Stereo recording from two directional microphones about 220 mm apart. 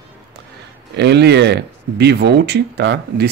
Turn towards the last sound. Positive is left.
turn(degrees=-50)  # may be behind; listen again after turning